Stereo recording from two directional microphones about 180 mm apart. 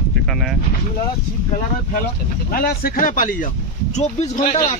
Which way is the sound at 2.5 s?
55° left (ahead or behind).